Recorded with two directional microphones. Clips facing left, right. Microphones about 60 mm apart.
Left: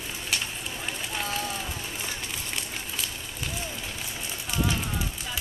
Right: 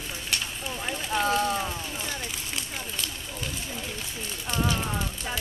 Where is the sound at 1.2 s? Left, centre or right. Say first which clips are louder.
Right 8 dB; right.